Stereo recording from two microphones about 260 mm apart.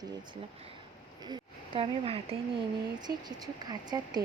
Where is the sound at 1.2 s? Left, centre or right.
Centre.